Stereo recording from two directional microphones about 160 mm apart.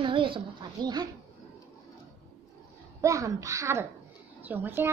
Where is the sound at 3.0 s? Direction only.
20° right (ahead or behind).